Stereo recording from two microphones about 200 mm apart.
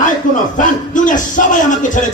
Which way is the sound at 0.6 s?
40° left (ahead or behind).